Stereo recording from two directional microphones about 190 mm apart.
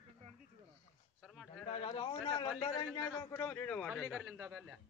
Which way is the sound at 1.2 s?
Centre (ahead or behind).